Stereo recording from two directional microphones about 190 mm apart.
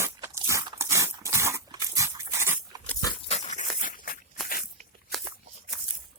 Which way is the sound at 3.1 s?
30° left (ahead or behind).